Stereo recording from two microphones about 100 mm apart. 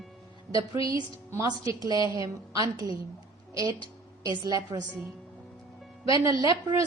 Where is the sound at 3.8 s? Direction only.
55° left (ahead or behind).